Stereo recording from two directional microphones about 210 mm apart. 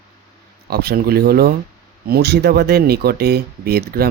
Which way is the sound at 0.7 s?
50° right (ahead or behind).